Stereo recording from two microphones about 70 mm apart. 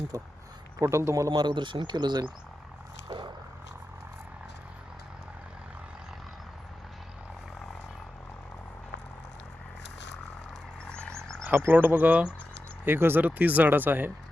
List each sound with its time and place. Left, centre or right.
0.1 s speech: right
1.4 s speech: right
10.8 s a sound: centre
11.4 s speech: right